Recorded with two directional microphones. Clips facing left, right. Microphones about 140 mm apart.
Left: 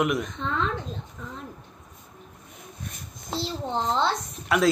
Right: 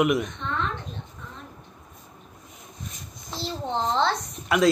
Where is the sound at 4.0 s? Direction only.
Centre (ahead or behind).